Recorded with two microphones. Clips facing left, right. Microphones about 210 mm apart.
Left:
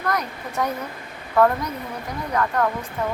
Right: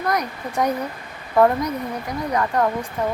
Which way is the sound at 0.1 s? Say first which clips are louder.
Right 1 dB; 15° right (ahead or behind).